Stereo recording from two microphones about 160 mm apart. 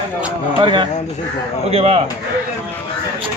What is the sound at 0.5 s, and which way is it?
A man's voice, 30° right (ahead or behind).